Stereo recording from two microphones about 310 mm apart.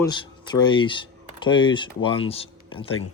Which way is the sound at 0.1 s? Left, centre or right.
Centre.